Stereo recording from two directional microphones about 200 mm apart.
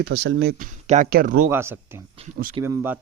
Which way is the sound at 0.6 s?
40° right (ahead or behind).